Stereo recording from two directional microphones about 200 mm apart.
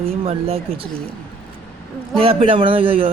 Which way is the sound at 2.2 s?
30° right (ahead or behind).